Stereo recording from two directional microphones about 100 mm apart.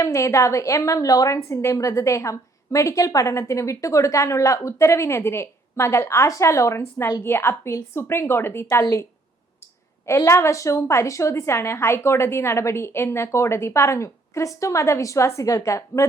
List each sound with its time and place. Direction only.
0.0 s a woman's voice: 30° left (ahead or behind)
10.2 s a woman's voice: 30° left (ahead or behind)